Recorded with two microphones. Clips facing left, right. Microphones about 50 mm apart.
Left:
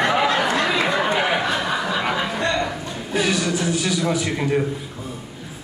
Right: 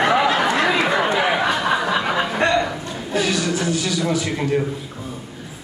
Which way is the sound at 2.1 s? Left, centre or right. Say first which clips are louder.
Right 3 dB; right.